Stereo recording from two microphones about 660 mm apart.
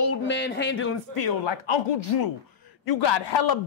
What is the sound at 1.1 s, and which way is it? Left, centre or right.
Speech, left.